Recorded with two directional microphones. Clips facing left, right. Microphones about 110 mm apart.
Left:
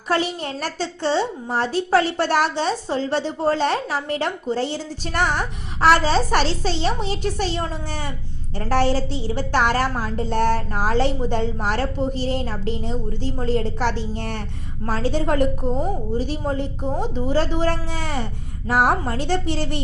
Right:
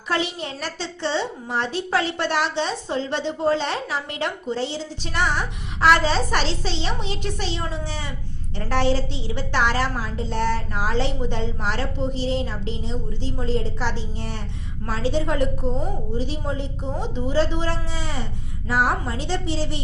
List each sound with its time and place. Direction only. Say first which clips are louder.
0.1 s a woman's voice: left 3 dB; 45° left (ahead or behind)
14.8 s a woman's voice: left 2 dB; 45° left (ahead or behind)